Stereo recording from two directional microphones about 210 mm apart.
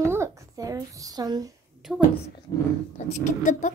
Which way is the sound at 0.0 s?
15° right (ahead or behind).